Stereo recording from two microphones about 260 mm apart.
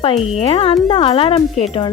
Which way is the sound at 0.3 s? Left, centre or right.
Left.